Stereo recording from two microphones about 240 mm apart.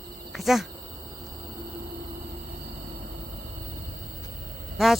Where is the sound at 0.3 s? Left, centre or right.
Centre.